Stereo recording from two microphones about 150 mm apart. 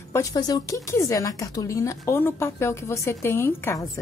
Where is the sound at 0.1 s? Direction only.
20° left (ahead or behind).